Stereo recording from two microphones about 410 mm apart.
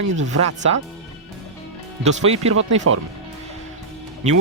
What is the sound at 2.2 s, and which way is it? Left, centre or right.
Speech, centre.